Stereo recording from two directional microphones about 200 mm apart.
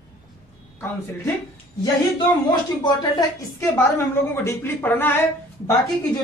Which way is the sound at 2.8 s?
20° left (ahead or behind).